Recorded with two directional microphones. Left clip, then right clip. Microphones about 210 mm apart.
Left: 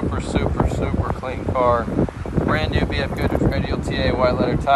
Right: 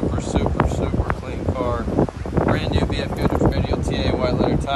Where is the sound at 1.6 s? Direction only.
5° right (ahead or behind).